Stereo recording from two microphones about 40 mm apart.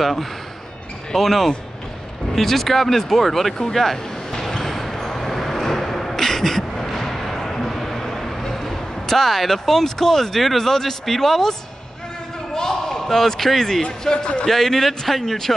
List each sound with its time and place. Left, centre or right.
0.0 s speech: centre
3.6 s a sound: centre
12.5 s basketball bounce: centre
13.1 s a man's voice: centre
14.0 s a man's voice: left
14.5 s a man's voice: centre